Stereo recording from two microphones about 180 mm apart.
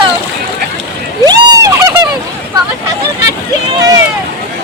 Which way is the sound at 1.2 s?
20° right (ahead or behind).